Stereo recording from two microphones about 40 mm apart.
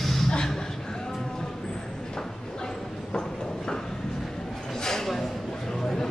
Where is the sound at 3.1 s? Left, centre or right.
Centre.